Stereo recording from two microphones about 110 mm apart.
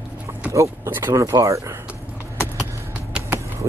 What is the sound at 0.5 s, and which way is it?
Speech, 25° right (ahead or behind).